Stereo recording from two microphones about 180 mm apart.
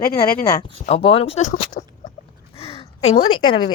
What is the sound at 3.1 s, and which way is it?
Speech, 25° left (ahead or behind).